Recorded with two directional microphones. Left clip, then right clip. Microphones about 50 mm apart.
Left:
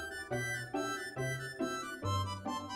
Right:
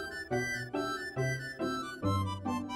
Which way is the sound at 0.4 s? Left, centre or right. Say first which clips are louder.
Right 2 dB; right.